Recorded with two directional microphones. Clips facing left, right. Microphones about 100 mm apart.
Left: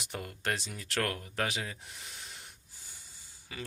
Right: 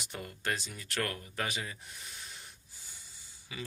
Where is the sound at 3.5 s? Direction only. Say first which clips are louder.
Even; 45° left (ahead or behind).